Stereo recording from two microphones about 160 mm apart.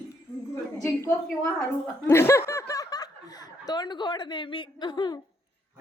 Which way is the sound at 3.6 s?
25° left (ahead or behind).